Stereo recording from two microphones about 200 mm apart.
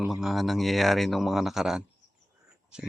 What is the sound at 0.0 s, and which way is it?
Speech, centre (ahead or behind).